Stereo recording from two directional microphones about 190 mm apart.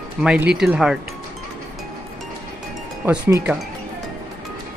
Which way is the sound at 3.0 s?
10° right (ahead or behind).